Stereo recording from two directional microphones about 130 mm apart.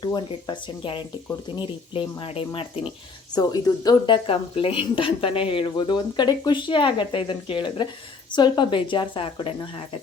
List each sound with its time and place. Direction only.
0.0 s speech: 35° left (ahead or behind)
3.3 s speech: 30° left (ahead or behind)